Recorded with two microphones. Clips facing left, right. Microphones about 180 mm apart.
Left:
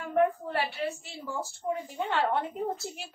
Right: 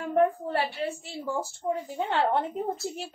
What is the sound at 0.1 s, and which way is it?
A woman's voice, 35° right (ahead or behind).